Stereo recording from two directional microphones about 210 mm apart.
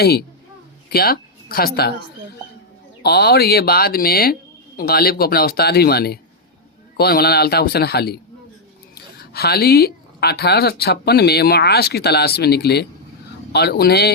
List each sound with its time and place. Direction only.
0.0 s speech: 50° left (ahead or behind)
3.0 s speech: 50° left (ahead or behind)
9.3 s speech: 50° left (ahead or behind)